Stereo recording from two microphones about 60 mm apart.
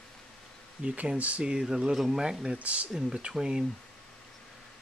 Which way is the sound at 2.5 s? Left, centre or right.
Right.